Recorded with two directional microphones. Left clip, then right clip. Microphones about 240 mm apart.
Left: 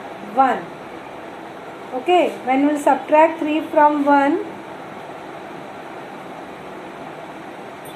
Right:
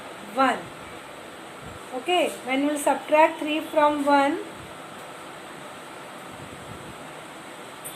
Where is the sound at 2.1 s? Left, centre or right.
Right.